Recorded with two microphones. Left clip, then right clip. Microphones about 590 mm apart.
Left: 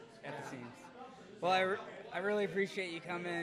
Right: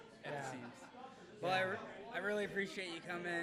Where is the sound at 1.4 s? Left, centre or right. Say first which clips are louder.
Left 5 dB; left.